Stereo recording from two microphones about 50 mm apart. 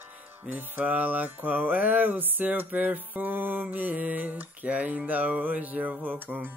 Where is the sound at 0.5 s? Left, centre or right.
Right.